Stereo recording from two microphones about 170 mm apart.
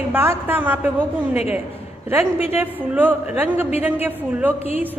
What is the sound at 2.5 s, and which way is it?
A woman's voice, 10° right (ahead or behind).